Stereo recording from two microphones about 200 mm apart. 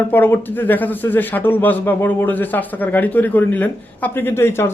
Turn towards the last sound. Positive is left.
turn(degrees=10)  # may be behind; listen again after turning